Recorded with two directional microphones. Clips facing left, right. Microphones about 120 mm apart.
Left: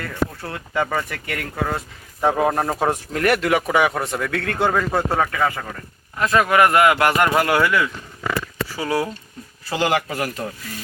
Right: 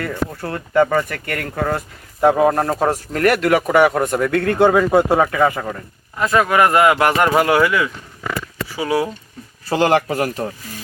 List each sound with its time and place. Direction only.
0.5 s speech: centre (ahead or behind)
3.4 s a man's voice: centre (ahead or behind)
6.6 s a man's voice: 20° right (ahead or behind)
7.3 s a man's voice: 5° right (ahead or behind)
9.6 s speech: 35° right (ahead or behind)